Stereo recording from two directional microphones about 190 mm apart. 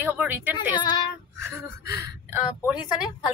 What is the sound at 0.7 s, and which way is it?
Female singing, 20° left (ahead or behind).